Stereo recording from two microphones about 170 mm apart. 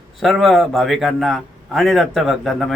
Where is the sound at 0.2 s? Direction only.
Centre (ahead or behind).